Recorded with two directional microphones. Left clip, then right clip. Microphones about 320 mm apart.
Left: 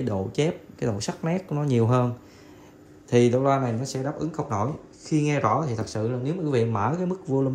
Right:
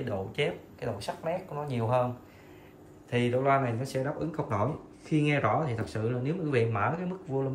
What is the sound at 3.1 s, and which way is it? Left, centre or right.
Speech, centre.